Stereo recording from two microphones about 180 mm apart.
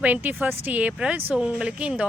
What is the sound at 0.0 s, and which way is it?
Speech, 10° right (ahead or behind).